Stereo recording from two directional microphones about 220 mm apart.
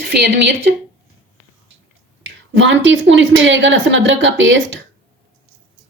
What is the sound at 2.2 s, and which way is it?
A woman's voice, 55° right (ahead or behind).